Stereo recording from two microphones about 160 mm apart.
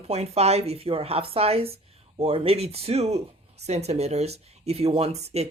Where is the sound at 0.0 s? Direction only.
40° right (ahead or behind).